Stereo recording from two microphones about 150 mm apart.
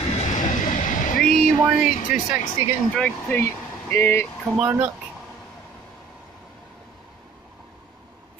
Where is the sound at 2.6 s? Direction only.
15° right (ahead or behind).